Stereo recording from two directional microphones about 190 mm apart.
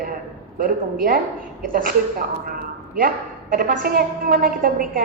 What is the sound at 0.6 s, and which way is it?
A woman's voice, 45° right (ahead or behind).